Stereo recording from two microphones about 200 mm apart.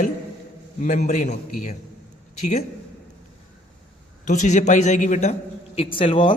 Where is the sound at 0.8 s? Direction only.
40° left (ahead or behind).